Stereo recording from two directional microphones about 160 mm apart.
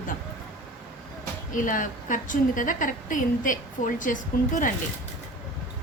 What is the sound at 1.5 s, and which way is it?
A woman's voice, 55° left (ahead or behind).